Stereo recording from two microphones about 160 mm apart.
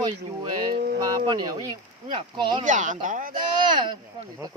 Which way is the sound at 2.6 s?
50° right (ahead or behind).